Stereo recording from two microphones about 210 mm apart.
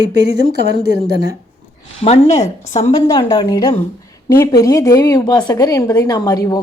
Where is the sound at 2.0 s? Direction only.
30° left (ahead or behind).